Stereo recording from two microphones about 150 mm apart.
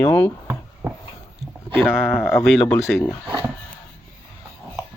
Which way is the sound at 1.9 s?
15° left (ahead or behind).